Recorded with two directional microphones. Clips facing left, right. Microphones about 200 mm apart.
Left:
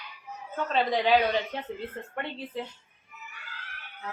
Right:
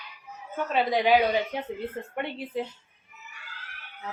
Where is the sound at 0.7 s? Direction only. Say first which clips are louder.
Right 2 dB; 10° right (ahead or behind).